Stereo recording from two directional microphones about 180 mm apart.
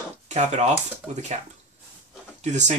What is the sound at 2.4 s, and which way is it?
Speech, 40° right (ahead or behind).